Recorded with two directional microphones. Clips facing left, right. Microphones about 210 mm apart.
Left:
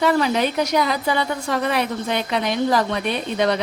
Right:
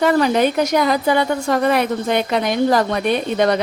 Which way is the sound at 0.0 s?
50° right (ahead or behind).